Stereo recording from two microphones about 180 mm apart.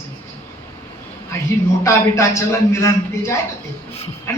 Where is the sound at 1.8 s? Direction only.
15° left (ahead or behind).